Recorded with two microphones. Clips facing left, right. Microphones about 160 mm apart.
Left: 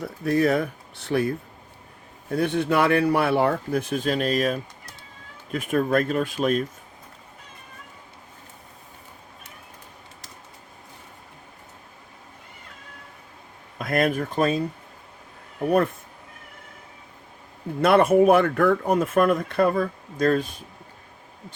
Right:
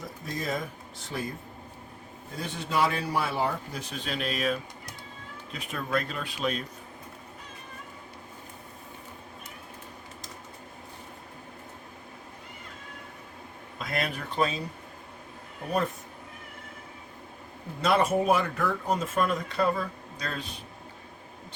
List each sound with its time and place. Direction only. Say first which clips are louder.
0.0 s speech: left 13 dB; 65° left (ahead or behind)
2.3 s speech: left 9 dB; 60° left (ahead or behind); by 6.7 s 45° left (ahead or behind)
13.7 s speech: left 9 dB; 50° left (ahead or behind)
17.7 s speech: left 8 dB; 60° left (ahead or behind)